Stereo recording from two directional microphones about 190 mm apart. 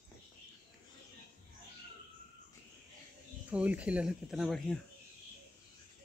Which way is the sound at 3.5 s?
5° right (ahead or behind).